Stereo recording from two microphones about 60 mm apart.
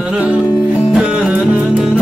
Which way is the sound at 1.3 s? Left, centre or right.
Right.